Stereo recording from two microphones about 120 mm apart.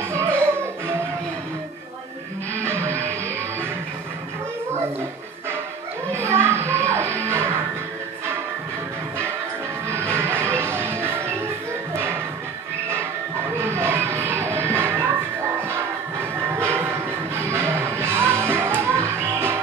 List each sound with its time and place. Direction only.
0.1 s music: 20° right (ahead or behind)
2.6 s music: 20° right (ahead or behind)
6.1 s music: 20° right (ahead or behind)
9.8 s music: 20° right (ahead or behind)
13.6 s music: 20° right (ahead or behind)
16.5 s music: 20° right (ahead or behind)